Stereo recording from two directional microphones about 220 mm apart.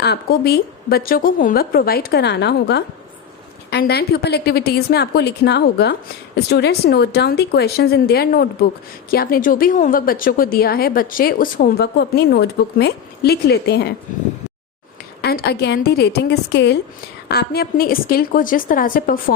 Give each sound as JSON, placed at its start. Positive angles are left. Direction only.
{"t": 0.0, "sound": "a woman's voice", "side_deg": 45}
{"t": 15.2, "sound": "a woman's voice", "side_deg": 45}